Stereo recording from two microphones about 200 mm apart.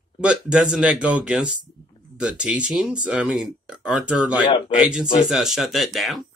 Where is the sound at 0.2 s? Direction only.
5° right (ahead or behind).